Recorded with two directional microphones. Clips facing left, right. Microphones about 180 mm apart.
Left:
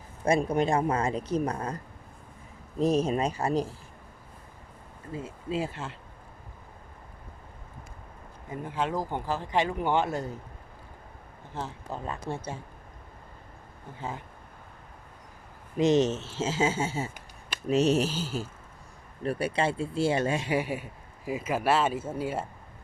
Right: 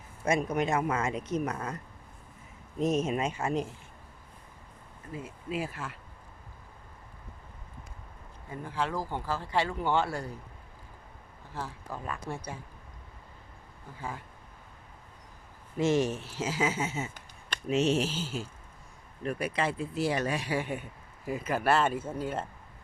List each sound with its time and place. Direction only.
0.3 s speech: 30° left (ahead or behind)
5.1 s speech: 25° left (ahead or behind)
8.4 s speech: 20° left (ahead or behind)
11.5 s speech: 20° left (ahead or behind)
14.0 s speech: 25° left (ahead or behind)
15.8 s speech: 20° left (ahead or behind)
20.6 s speech: 5° left (ahead or behind)